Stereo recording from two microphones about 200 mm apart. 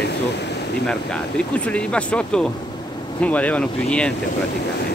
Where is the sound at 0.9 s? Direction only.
5° left (ahead or behind).